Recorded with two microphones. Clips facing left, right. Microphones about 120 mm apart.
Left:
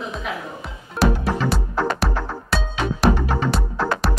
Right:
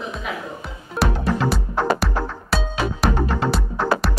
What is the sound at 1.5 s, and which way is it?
Music, centre (ahead or behind).